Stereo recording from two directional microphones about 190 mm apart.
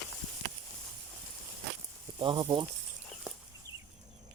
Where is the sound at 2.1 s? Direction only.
25° right (ahead or behind).